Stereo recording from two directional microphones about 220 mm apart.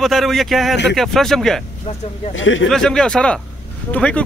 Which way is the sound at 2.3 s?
60° left (ahead or behind).